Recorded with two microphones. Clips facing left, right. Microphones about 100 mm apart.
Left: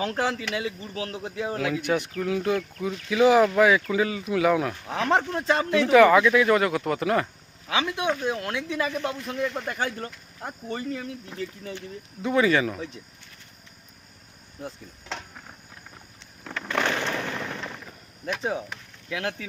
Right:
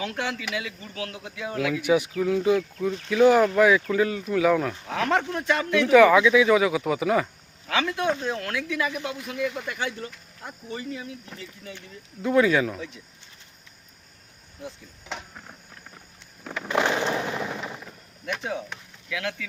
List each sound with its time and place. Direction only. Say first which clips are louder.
0.0 s speech: left 3 dB; 35° left (ahead or behind)
1.8 s speech: right 4 dB; 5° right (ahead or behind)
4.9 s speech: left 1 dB; 25° left (ahead or behind)
5.9 s speech: right 1 dB; centre (ahead or behind)
7.7 s speech: right 1 dB; 20° left (ahead or behind); by 11.1 s 50° left (ahead or behind)
11.3 s speech: left 7 dB; 10° left (ahead or behind)
12.2 s speech: right 1 dB; centre (ahead or behind)
15.0 s a sound: even; 5° right (ahead or behind)
16.6 s fireworks: right 3 dB; 15° right (ahead or behind)
17.8 s a sound: left 1 dB; centre (ahead or behind)
19.0 s speech: left 1 dB; 35° left (ahead or behind)